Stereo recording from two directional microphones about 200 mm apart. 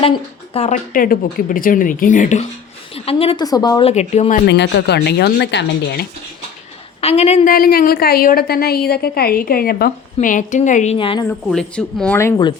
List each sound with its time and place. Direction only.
0.0 s a woman's voice: 30° left (ahead or behind)
4.4 s speech: 60° left (ahead or behind)
7.0 s a woman's voice: 30° left (ahead or behind)
7.5 s a woman's voice: 45° left (ahead or behind)
10.9 s speech: 25° left (ahead or behind)
11.3 s speech: 5° left (ahead or behind)